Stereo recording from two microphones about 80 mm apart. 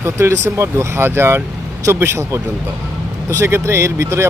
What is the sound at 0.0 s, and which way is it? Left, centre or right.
Speech, right.